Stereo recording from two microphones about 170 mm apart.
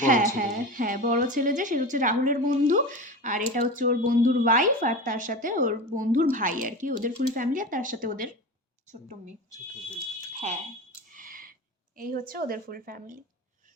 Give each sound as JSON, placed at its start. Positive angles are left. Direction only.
{"t": 0.0, "sound": "a woman's voice", "side_deg": -50}
{"t": 11.1, "sound": "a sound", "side_deg": -50}
{"t": 11.9, "sound": "a woman's voice", "side_deg": -55}